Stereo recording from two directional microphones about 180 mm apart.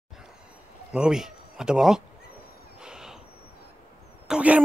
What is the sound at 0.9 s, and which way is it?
Speech, 5° right (ahead or behind).